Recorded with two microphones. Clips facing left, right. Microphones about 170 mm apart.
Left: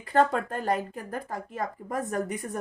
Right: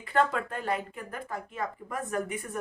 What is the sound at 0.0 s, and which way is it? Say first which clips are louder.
Speech: left 3 dB; 40° left (ahead or behind).